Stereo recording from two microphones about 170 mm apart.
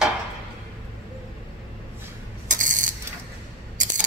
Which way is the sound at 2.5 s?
50° right (ahead or behind).